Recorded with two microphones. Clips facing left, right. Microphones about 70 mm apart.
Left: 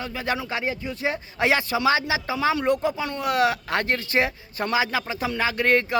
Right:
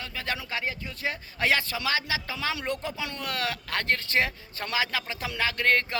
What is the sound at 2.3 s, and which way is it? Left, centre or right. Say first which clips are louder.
Speech: left 9 dB; centre.